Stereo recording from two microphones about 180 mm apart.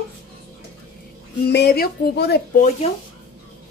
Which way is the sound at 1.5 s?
60° left (ahead or behind).